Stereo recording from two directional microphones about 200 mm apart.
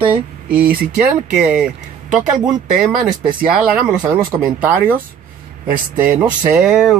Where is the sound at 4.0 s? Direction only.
20° right (ahead or behind); by 7.0 s centre (ahead or behind).